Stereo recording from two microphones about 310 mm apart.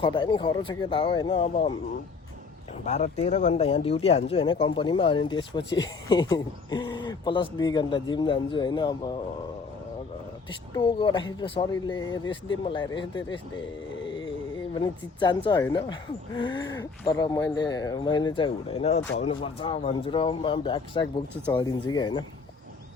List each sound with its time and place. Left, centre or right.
0.0 s speech: centre
2.8 s speech: left
10.8 s speech: centre
14.8 s speech: centre